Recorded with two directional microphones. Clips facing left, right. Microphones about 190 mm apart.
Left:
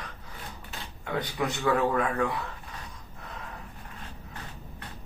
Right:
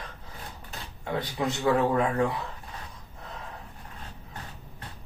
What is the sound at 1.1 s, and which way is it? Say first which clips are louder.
Speech: right 1 dB; 25° right (ahead or behind).